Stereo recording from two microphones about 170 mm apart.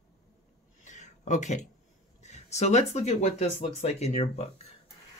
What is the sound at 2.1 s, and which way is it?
Speech, 40° left (ahead or behind).